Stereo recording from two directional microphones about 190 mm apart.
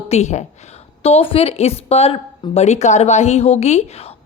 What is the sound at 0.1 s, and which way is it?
A woman's voice, 35° left (ahead or behind).